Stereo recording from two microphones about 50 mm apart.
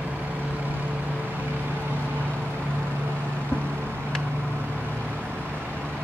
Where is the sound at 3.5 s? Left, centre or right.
Left.